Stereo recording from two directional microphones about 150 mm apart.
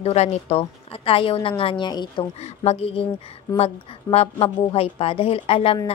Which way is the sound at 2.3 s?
45° left (ahead or behind).